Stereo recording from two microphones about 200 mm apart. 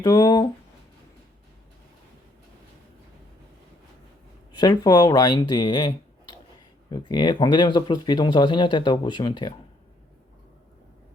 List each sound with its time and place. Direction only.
0.0 s speech: 20° left (ahead or behind)
4.5 s speech: 20° left (ahead or behind)